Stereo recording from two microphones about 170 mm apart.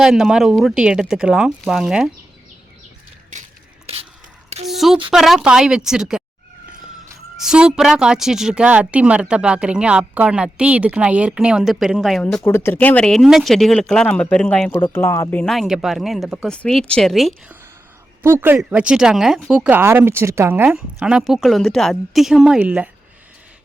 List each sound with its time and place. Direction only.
0.0 s a woman's voice: 5° right (ahead or behind)
3.3 s a sound: 45° right (ahead or behind)
4.7 s a sound: centre (ahead or behind)
5.1 s a woman's voice: centre (ahead or behind)
7.3 s a woman's voice: 5° right (ahead or behind)
15.5 s a woman's voice: centre (ahead or behind)
18.2 s a woman's voice: 15° right (ahead or behind)